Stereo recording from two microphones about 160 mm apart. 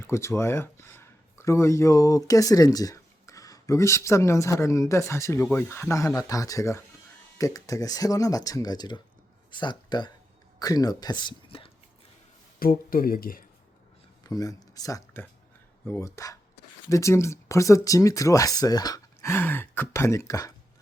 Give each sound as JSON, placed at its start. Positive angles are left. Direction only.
{"t": 0.1, "sound": "speech", "side_deg": 15}
{"t": 12.5, "sound": "speech", "side_deg": 65}
{"t": 14.3, "sound": "speech", "side_deg": 25}